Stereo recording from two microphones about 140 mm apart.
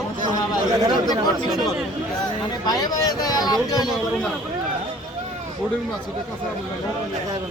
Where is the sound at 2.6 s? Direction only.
25° left (ahead or behind).